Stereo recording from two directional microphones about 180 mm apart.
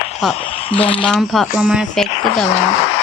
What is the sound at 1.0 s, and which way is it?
Speech, centre (ahead or behind).